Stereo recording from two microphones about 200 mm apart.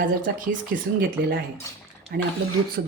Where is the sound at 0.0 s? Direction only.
40° right (ahead or behind).